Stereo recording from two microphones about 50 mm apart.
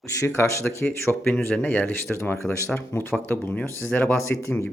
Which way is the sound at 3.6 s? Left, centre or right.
Left.